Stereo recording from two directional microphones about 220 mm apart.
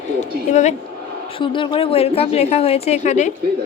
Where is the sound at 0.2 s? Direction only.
30° left (ahead or behind).